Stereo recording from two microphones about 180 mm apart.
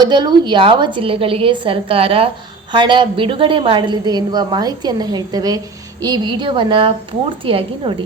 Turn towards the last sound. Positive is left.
turn(degrees=-30)  # may be behind; listen again after turning